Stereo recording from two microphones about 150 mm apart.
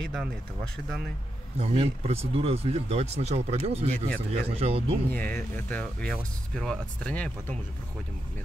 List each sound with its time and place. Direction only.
0.0 s speech: centre (ahead or behind)
1.6 s speech: 40° right (ahead or behind)
5.1 s speech: 10° left (ahead or behind)